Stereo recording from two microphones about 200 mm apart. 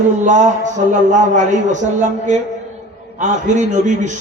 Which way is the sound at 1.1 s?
35° right (ahead or behind).